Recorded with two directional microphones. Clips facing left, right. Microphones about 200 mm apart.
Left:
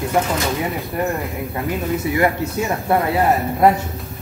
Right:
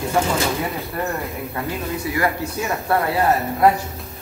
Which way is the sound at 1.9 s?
20° left (ahead or behind).